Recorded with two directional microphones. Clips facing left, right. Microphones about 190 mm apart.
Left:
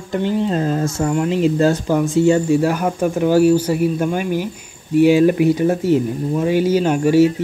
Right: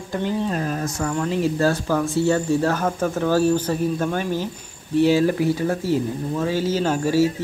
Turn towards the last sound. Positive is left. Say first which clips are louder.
# left 6 dB
turn(degrees=20)  # may be behind; listen again after turning